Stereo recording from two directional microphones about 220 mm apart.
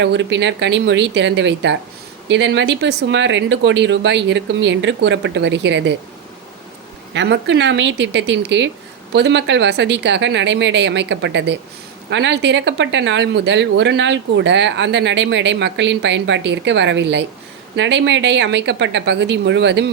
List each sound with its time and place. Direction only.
0.0 s speech: 55° right (ahead or behind)
7.1 s speech: 55° right (ahead or behind)